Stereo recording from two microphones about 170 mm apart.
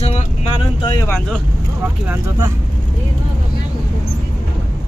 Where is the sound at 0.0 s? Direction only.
35° left (ahead or behind).